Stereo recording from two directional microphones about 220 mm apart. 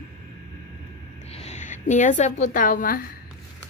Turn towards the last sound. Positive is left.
turn(degrees=40)  # may be behind; listen again after turning